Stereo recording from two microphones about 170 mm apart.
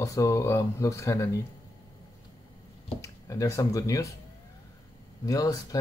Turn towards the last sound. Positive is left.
turn(degrees=20)  # may be behind; listen again after turning